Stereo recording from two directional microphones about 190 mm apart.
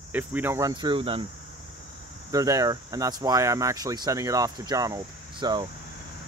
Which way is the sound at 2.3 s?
20° right (ahead or behind).